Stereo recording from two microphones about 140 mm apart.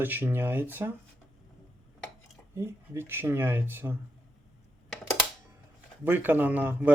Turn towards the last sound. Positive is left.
turn(degrees=-10)  # may be behind; listen again after turning